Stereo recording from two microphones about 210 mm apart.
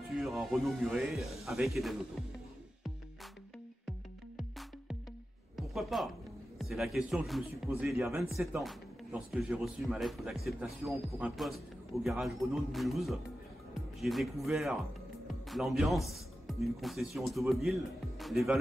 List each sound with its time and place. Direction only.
0.1 s a man's voice: centre (ahead or behind)
4.4 s music: centre (ahead or behind)
5.6 s a man's voice: centre (ahead or behind)